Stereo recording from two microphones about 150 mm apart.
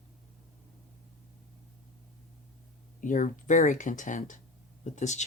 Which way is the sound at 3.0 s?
60° left (ahead or behind).